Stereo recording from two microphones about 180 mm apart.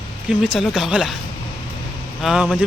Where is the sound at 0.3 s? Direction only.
Centre (ahead or behind).